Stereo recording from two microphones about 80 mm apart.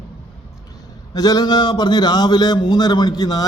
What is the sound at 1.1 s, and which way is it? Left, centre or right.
A man's voice, left.